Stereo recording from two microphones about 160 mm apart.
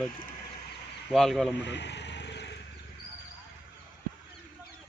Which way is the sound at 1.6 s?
90° left.